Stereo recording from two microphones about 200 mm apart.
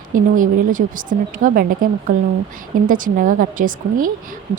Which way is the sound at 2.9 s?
45° right (ahead or behind).